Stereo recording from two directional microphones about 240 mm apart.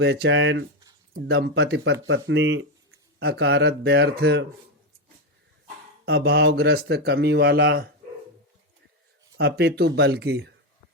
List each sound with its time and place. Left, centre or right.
0.0 s speech: right
6.1 s speech: right
9.4 s speech: right